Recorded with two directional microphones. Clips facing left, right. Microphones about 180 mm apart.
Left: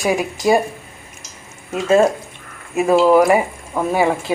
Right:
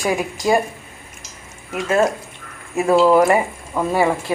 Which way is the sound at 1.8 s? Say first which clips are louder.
Left 4 dB; 25° left (ahead or behind).